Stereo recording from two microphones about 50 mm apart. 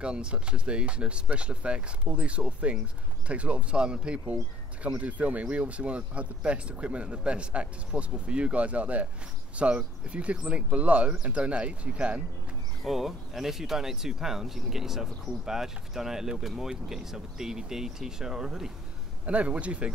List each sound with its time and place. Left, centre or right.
0.0 s speech: right
12.8 s speech: centre
19.2 s speech: right